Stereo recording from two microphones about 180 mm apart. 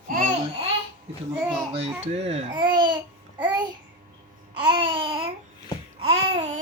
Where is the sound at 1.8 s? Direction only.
35° right (ahead or behind).